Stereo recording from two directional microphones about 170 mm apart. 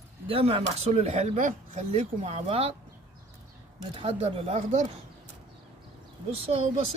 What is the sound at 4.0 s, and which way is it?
Speech, 35° right (ahead or behind).